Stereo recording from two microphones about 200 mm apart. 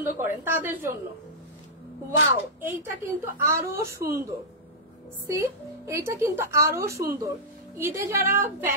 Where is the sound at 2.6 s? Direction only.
10° right (ahead or behind).